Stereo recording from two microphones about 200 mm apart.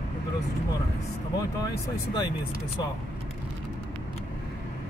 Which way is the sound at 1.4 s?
15° left (ahead or behind).